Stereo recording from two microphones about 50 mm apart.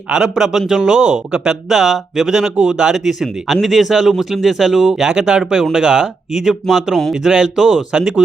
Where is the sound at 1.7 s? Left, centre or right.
Centre.